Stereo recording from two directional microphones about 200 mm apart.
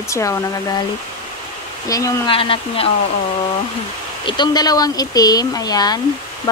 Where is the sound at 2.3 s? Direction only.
25° left (ahead or behind).